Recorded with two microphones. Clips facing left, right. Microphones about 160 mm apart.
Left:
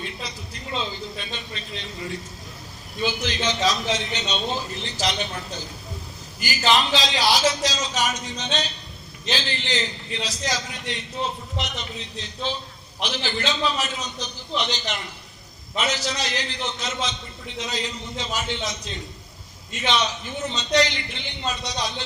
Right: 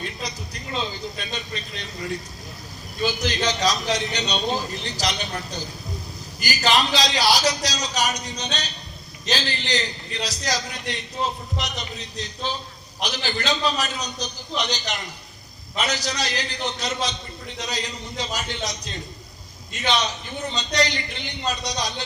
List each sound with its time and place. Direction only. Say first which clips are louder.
0.2 s a man's voice: right 2 dB; 40° right (ahead or behind)
3.0 s a man's voice: right 2 dB; 40° right (ahead or behind)